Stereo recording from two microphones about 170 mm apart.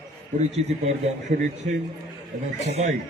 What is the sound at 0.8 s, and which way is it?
A man's voice, 45° right (ahead or behind).